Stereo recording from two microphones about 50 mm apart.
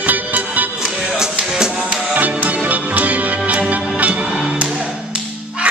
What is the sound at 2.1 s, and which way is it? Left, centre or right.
Music, right.